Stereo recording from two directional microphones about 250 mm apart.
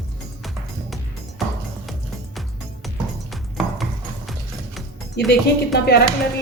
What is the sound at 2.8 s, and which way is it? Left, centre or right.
Music, centre.